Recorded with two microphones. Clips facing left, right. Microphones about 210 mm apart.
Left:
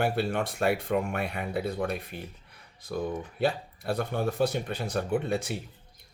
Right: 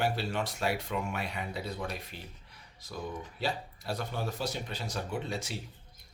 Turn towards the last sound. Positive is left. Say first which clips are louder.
# left 8 dB
turn(degrees=55)  # may be behind; listen again after turning